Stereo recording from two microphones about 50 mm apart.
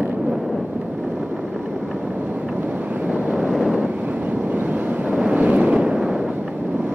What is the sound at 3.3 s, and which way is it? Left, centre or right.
Vehicle, centre.